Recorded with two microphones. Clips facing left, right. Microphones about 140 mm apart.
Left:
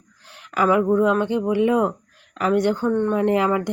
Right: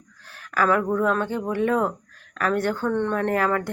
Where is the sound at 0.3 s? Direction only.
20° left (ahead or behind).